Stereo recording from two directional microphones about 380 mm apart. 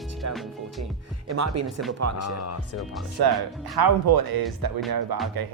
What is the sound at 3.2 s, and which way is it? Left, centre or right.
Speech, right.